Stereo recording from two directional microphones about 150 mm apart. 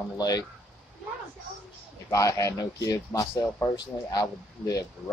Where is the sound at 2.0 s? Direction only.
20° left (ahead or behind).